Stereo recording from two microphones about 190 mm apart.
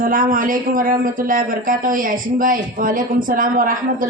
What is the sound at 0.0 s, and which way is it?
Speech, 45° right (ahead or behind).